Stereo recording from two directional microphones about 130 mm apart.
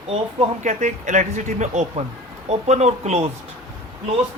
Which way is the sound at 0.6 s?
70° right (ahead or behind).